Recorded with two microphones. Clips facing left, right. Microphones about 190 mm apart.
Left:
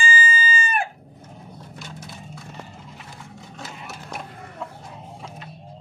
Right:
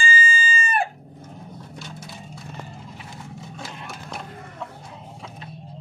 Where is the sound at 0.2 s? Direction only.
30° right (ahead or behind).